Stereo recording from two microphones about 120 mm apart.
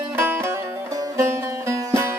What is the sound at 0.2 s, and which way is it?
Music, 20° right (ahead or behind).